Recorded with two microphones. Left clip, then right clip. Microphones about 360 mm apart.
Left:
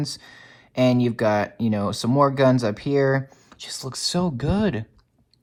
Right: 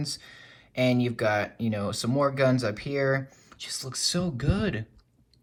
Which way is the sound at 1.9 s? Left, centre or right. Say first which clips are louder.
Left 7 dB; centre.